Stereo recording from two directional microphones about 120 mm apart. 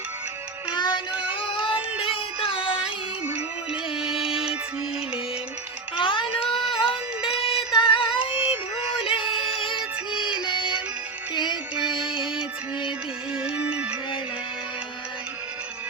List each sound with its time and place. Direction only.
0.7 s music: 40° left (ahead or behind)
3.2 s music: 5° right (ahead or behind)
6.0 s a sound: 45° left (ahead or behind)
7.3 s music: 50° left (ahead or behind)
13.3 s music: 10° right (ahead or behind)